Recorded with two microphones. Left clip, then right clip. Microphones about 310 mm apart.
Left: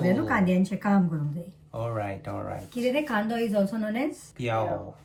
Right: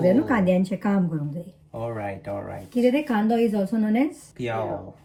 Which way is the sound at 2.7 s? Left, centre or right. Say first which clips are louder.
Right 5 dB; centre.